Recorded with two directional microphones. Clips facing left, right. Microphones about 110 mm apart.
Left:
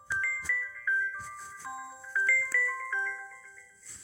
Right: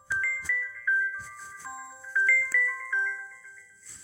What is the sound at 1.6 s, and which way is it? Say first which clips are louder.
Music: even; 15° left (ahead or behind).